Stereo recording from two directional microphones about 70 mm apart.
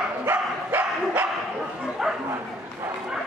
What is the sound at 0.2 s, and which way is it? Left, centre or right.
Bow-wow, right.